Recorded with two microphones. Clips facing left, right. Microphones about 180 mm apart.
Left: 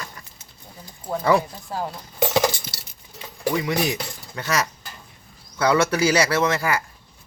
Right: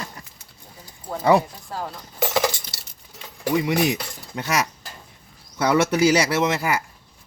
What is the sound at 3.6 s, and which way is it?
Speech, 20° right (ahead or behind).